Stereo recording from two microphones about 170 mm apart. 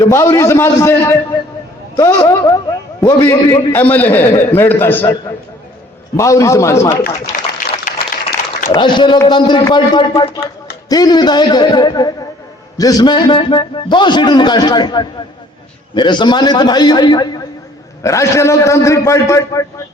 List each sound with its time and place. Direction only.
0.0 s a man's voice: 15° left (ahead or behind)
6.1 s a man's voice: 20° left (ahead or behind)
7.9 s a sound: 65° left (ahead or behind)
8.7 s a man's voice: 25° left (ahead or behind)